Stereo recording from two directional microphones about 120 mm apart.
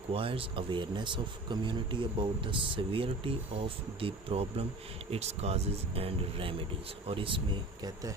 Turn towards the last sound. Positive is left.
turn(degrees=-45)  # may be behind; listen again after turning